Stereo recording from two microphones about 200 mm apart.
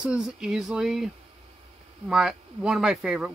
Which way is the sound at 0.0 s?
5° right (ahead or behind).